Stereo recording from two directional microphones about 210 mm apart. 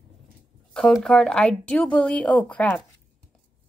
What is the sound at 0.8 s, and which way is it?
A woman's voice, 5° left (ahead or behind).